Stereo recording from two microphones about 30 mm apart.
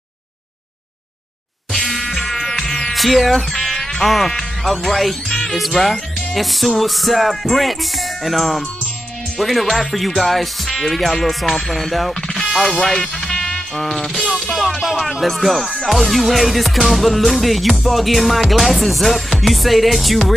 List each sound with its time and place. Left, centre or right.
1.9 s music: centre
2.6 s music: centre
2.9 s speech: centre
4.0 s music: centre
13.7 s music: centre